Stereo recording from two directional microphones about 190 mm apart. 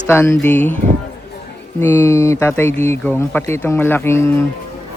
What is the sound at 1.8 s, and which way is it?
Speech, 15° left (ahead or behind).